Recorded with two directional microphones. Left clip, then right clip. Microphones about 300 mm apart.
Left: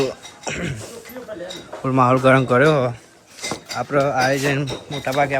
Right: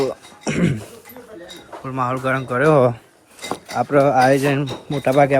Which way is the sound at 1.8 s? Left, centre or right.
Centre.